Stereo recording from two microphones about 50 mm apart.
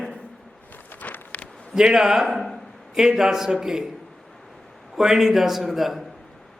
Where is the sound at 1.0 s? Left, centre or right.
Left.